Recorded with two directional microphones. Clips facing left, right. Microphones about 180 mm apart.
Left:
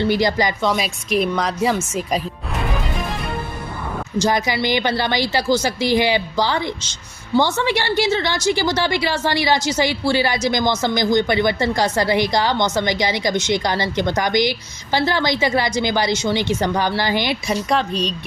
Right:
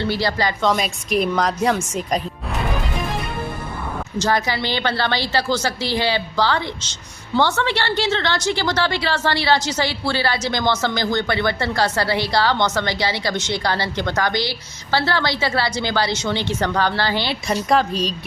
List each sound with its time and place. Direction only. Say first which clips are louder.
0.0 s a woman's voice: left 3 dB; 15° left (ahead or behind)
0.6 s speech: right 1 dB; centre (ahead or behind)
4.2 s a woman's voice: left 2 dB; 15° left (ahead or behind)
17.7 s speech: right 3 dB; centre (ahead or behind)